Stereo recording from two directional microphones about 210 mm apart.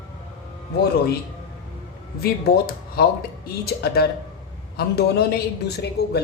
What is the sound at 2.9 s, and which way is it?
Speech, 45° left (ahead or behind).